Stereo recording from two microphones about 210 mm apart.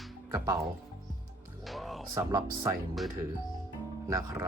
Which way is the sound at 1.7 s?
Centre (ahead or behind).